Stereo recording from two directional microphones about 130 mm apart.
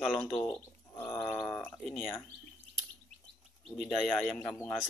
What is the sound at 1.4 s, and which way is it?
Speech, 10° left (ahead or behind).